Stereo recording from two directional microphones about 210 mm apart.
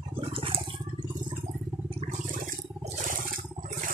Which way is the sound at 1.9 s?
40° right (ahead or behind).